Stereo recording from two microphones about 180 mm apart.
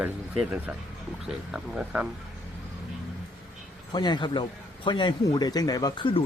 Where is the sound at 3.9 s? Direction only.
25° left (ahead or behind).